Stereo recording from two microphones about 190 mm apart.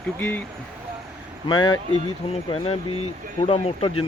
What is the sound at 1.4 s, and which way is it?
Speech, 25° left (ahead or behind).